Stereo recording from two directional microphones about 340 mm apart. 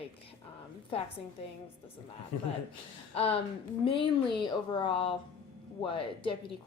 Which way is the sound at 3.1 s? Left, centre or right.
Centre.